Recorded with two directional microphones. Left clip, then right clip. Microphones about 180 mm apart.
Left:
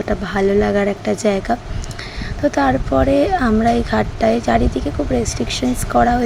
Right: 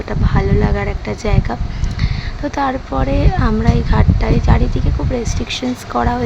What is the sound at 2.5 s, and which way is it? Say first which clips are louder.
Speech: left 1 dB; 15° left (ahead or behind).